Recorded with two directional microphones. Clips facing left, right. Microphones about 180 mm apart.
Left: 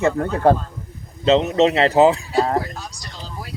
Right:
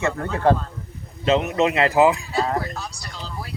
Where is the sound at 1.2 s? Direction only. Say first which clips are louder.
Left 4 dB; 25° left (ahead or behind).